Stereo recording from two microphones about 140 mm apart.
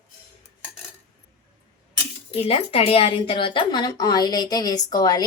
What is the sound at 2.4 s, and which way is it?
A woman's voice, 45° left (ahead or behind).